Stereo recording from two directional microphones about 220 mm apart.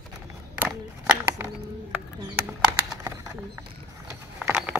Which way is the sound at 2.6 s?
15° right (ahead or behind).